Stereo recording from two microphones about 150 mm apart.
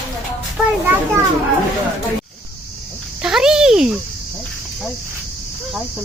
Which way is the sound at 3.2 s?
5° right (ahead or behind).